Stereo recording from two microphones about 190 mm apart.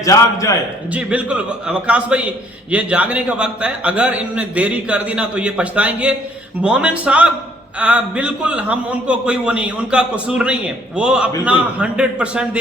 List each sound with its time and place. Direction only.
0.0 s a man's voice: 15° left (ahead or behind)
0.9 s a man's voice: 5° right (ahead or behind)